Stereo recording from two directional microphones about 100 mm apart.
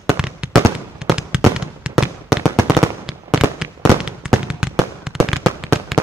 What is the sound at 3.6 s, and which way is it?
Fireworks, 5° right (ahead or behind).